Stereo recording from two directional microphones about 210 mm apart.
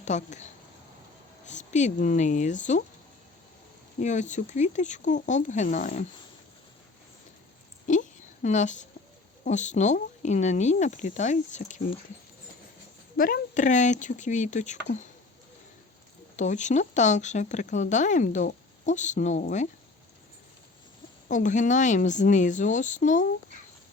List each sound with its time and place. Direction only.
0.0 s speech: 35° left (ahead or behind)
4.0 s speech: 35° left (ahead or behind)
7.9 s a sound: 35° left (ahead or behind)
9.4 s speech: 35° left (ahead or behind)
13.1 s speech: 45° left (ahead or behind)
16.3 s speech: 35° left (ahead or behind)
21.2 s speech: 35° left (ahead or behind)